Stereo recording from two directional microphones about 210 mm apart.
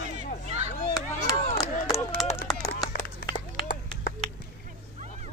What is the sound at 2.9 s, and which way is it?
Run, 45° left (ahead or behind).